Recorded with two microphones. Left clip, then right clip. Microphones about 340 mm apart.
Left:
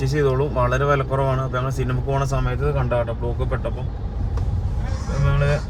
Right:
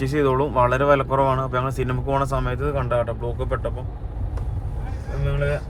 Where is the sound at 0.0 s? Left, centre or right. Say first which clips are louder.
Right 1 dB; right.